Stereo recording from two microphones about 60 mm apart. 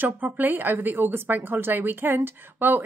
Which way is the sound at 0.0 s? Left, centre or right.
Right.